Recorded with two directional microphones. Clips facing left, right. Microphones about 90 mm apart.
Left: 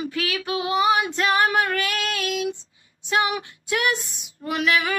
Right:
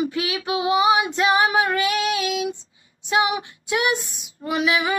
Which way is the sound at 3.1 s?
15° right (ahead or behind).